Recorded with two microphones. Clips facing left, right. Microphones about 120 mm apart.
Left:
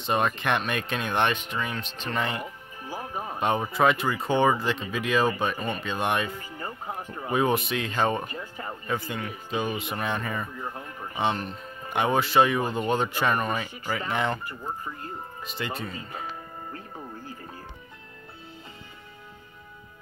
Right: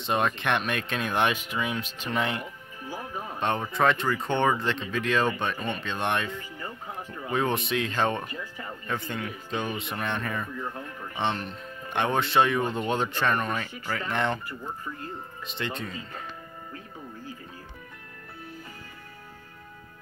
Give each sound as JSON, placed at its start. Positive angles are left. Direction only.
{"t": 0.0, "sound": "speech", "side_deg": 0}
{"t": 3.3, "sound": "speech", "side_deg": 10}
{"t": 8.3, "sound": "speech", "side_deg": 35}
{"t": 8.8, "sound": "speech", "side_deg": 5}
{"t": 15.4, "sound": "speech", "side_deg": 5}